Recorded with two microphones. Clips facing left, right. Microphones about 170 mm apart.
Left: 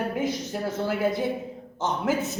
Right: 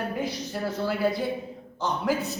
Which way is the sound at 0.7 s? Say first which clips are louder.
Even; 20° left (ahead or behind).